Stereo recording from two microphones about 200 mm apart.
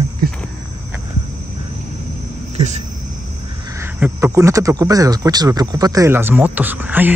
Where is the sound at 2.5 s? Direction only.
35° right (ahead or behind).